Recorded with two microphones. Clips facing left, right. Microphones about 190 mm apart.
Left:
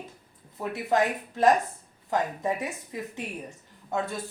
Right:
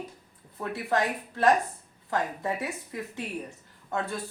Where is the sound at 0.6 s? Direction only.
15° left (ahead or behind).